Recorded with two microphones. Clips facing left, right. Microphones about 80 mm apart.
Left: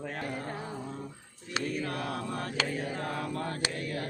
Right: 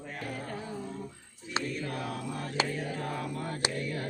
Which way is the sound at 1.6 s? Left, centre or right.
Right.